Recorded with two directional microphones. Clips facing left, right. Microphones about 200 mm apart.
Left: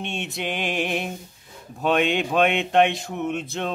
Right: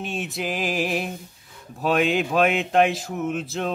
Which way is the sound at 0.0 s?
Centre (ahead or behind).